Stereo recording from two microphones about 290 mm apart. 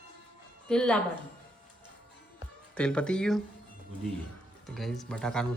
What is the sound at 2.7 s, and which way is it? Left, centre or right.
Speech, centre.